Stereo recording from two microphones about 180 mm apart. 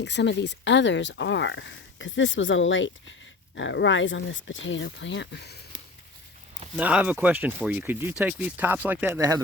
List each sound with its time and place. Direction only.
0.0 s speech: 75° left (ahead or behind)
6.7 s speech: 10° right (ahead or behind)